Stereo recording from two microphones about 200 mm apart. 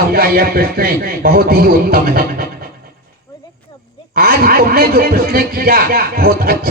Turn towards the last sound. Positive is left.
turn(degrees=-45)  # may be behind; listen again after turning